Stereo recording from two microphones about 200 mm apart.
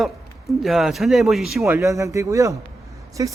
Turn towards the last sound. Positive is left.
turn(degrees=-15)  # may be behind; listen again after turning